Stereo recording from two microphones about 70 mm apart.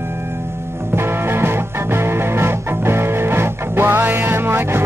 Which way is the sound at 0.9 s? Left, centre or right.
Right.